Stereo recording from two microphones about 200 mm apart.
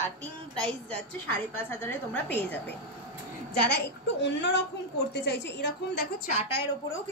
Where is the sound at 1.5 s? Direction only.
10° left (ahead or behind).